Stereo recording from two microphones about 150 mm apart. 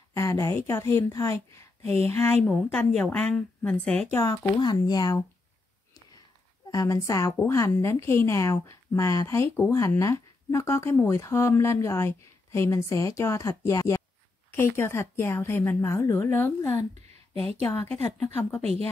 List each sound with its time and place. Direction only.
0.1 s a woman's voice: 20° left (ahead or behind)
1.8 s a sound: 40° right (ahead or behind)
2.0 s a woman's voice: 15° left (ahead or behind)
4.1 s a woman's voice: 20° left (ahead or behind)
6.7 s a woman's voice: 20° left (ahead or behind)
18.2 s a woman's voice: 10° left (ahead or behind)
18.6 s a woman's voice: 45° right (ahead or behind)